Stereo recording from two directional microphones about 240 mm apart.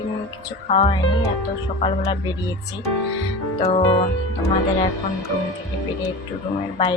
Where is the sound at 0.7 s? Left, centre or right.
Left.